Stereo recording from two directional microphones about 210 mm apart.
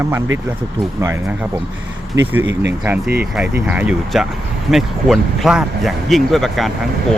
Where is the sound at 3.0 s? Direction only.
45° right (ahead or behind).